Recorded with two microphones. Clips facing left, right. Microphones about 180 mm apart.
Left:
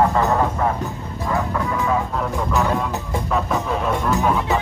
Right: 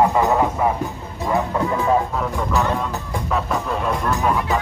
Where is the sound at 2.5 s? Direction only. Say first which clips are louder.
Left 1 dB; centre (ahead or behind).